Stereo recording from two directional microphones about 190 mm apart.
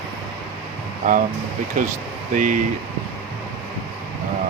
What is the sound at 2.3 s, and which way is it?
Speech, 45° right (ahead or behind).